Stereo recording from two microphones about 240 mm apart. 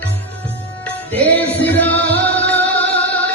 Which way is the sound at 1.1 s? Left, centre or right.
Centre.